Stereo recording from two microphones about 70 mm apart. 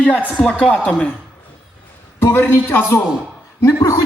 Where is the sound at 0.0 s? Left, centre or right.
Centre.